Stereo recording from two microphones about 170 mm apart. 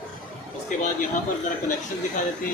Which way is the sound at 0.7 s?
50° left (ahead or behind).